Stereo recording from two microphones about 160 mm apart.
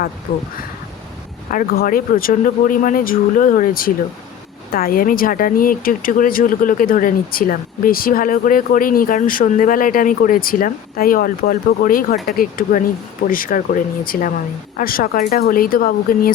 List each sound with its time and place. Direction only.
1.5 s speech: 65° left (ahead or behind)